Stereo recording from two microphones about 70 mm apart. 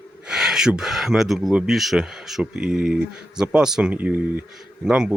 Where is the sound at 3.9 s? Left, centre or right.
Right.